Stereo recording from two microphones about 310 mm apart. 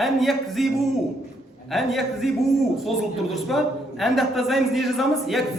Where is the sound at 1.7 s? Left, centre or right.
Centre.